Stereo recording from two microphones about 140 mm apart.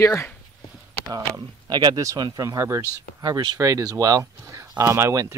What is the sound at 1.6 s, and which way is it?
Speech, 30° right (ahead or behind).